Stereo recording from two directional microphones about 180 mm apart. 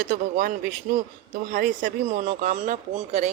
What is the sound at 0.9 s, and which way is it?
Speech, 60° right (ahead or behind).